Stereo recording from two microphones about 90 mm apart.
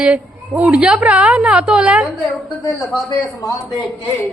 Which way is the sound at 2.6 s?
35° left (ahead or behind).